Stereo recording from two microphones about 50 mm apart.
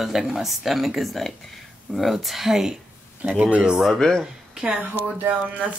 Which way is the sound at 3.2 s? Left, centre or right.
Right.